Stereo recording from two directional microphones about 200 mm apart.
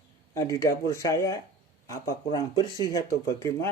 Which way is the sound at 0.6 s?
15° left (ahead or behind).